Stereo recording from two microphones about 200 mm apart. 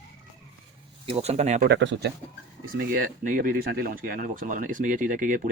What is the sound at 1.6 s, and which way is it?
Speech, 60° right (ahead or behind).